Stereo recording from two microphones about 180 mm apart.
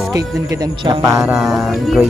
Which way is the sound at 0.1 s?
20° right (ahead or behind).